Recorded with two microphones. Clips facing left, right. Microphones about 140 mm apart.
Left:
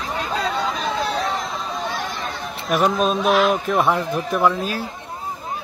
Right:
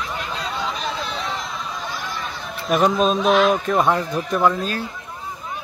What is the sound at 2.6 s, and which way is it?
Speech, centre (ahead or behind).